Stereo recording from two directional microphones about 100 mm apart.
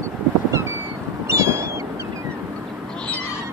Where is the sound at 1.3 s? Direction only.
25° right (ahead or behind).